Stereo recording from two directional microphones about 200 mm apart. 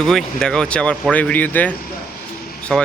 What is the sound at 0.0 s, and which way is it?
Speech, centre (ahead or behind).